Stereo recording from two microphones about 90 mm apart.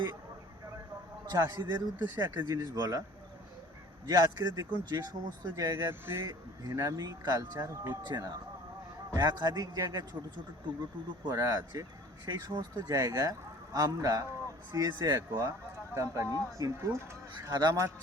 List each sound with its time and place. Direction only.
1.3 s speech: 50° right (ahead or behind)
4.0 s speech: 45° right (ahead or behind)
5.9 s speech: 30° right (ahead or behind)
6.6 s speech: 45° right (ahead or behind)
11.2 s speech: 45° right (ahead or behind)
17.5 s speech: 55° right (ahead or behind)